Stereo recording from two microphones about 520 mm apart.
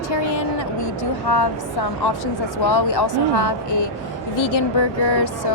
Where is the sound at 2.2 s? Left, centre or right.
Left.